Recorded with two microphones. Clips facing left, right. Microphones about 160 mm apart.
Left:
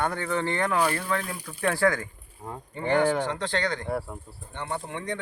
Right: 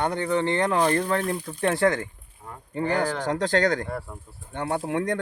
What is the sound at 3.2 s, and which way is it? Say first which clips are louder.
Speech: right 6 dB; 40° right (ahead or behind).